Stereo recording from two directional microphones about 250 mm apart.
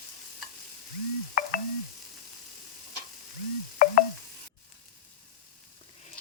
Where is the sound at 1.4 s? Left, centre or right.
Left.